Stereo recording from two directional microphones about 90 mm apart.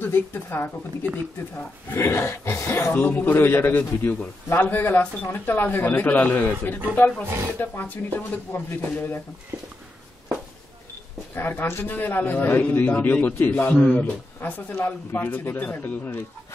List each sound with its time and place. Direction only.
0.0 s a man's voice: 25° left (ahead or behind)
7.2 s speech: 30° right (ahead or behind)
7.5 s a man's voice: 20° left (ahead or behind)
11.3 s a man's voice: 25° left (ahead or behind)